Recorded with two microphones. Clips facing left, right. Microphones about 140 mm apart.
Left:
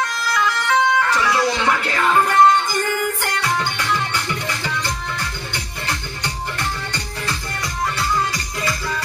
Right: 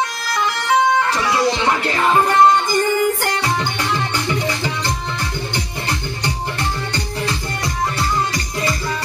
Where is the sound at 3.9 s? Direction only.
20° right (ahead or behind).